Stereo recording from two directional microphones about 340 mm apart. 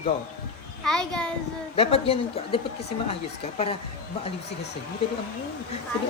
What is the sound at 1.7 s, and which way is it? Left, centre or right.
Speech, centre.